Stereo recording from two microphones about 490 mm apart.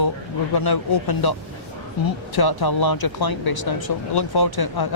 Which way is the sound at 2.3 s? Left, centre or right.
Left.